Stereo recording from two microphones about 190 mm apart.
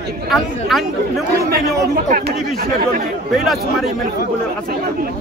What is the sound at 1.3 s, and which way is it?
Speech, 50° right (ahead or behind).